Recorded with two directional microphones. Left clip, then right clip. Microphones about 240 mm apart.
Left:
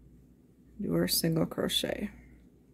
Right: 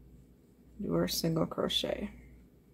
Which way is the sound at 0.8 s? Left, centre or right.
Left.